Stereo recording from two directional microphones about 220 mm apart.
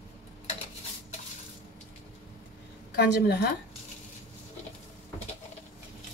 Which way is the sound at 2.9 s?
45° left (ahead or behind).